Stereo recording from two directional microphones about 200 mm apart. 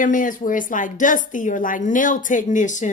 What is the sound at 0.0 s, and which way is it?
A woman's voice, 40° left (ahead or behind).